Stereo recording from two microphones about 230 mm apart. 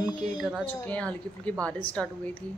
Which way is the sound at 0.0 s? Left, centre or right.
Centre.